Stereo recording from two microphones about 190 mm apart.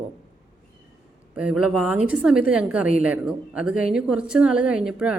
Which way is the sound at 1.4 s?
5° right (ahead or behind).